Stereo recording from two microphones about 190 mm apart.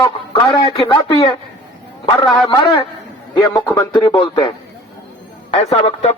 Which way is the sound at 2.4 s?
25° left (ahead or behind).